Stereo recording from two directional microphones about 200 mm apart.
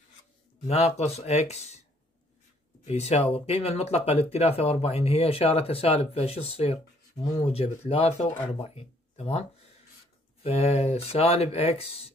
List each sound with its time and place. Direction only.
0.7 s speech: 30° left (ahead or behind)
2.8 s speech: 30° left (ahead or behind)
10.4 s speech: 30° left (ahead or behind)